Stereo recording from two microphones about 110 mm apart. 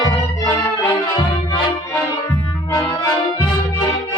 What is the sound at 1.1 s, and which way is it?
Music, 35° left (ahead or behind).